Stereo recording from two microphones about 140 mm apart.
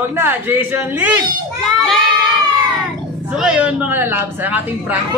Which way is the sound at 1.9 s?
Centre (ahead or behind).